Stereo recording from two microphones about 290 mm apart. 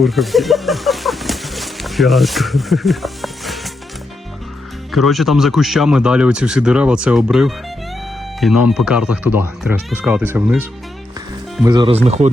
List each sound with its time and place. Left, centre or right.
0.0 s speech: centre
4.9 s speech: centre; by 12.3 s right